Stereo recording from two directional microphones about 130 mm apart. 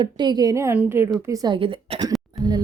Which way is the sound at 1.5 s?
40° right (ahead or behind).